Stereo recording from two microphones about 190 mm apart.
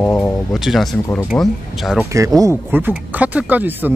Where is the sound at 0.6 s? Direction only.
Centre (ahead or behind).